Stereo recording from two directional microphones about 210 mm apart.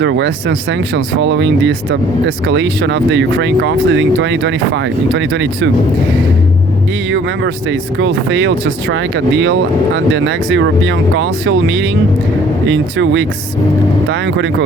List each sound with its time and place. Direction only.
0.0 s speech: 60° right (ahead or behind)
7.1 s speech: 60° right (ahead or behind)